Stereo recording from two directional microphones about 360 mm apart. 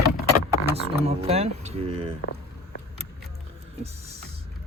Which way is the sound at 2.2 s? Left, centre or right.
Left.